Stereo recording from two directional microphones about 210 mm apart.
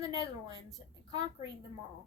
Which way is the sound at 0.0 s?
20° right (ahead or behind).